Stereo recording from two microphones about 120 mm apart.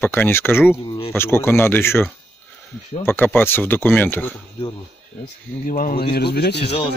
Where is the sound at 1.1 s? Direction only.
20° left (ahead or behind).